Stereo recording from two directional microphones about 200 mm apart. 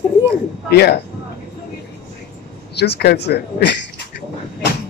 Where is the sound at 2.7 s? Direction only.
55° left (ahead or behind).